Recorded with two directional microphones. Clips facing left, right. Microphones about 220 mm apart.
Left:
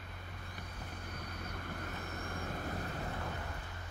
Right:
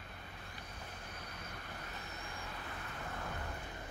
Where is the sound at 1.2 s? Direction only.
50° left (ahead or behind).